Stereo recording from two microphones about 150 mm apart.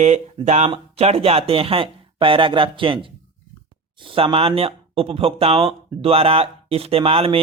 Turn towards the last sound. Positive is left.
turn(degrees=-40)  # may be behind; listen again after turning